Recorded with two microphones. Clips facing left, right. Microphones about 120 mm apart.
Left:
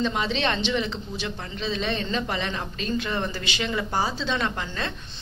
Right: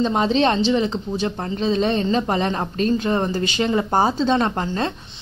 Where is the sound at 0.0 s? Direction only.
35° right (ahead or behind).